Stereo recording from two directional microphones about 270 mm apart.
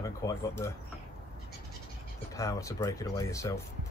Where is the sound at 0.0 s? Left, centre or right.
Centre.